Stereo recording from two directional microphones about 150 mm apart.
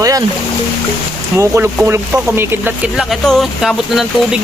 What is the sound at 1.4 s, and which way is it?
Speech, 15° right (ahead or behind).